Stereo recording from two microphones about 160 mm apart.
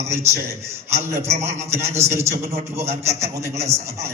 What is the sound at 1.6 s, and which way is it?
A man's voice, 15° right (ahead or behind).